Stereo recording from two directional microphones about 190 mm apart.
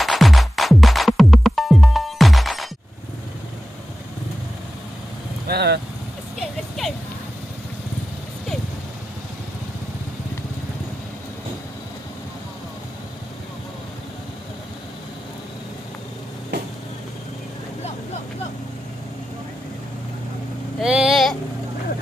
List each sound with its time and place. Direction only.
0.0 s music: centre (ahead or behind)
5.5 s vehicle: 60° right (ahead or behind)
20.8 s vehicle: 5° right (ahead or behind)